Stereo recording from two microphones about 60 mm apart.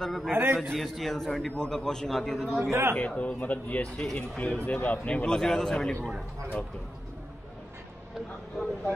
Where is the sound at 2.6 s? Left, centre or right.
Right.